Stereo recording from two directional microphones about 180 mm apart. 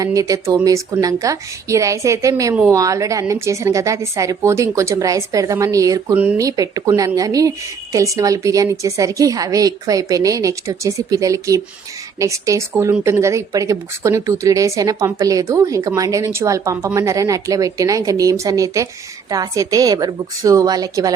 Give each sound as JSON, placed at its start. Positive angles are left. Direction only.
{"t": 0.0, "sound": "a woman's voice", "side_deg": -20}